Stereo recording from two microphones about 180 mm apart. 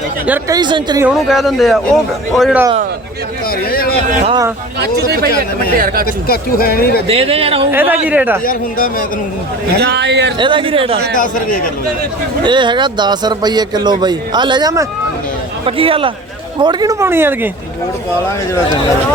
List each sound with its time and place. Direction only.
0.3 s a man's voice: 20° right (ahead or behind)
1.0 s speech: centre (ahead or behind)
3.7 s speech: 55° left (ahead or behind)
4.8 s speech: 60° right (ahead or behind)
6.1 s speech: 55° left (ahead or behind)
7.1 s speech: 30° right (ahead or behind)
7.7 s a woman's voice: 10° right (ahead or behind)
8.4 s speech: 50° left (ahead or behind)
9.7 s a man's voice: 70° right (ahead or behind)
10.3 s a man's voice: 25° right (ahead or behind)
11.2 s speech: 50° left (ahead or behind)
12.4 s a man's voice: 25° right (ahead or behind)
15.6 s a woman's voice: 30° right (ahead or behind); by 17.5 s 10° right (ahead or behind)
18.3 s speech: 15° left (ahead or behind)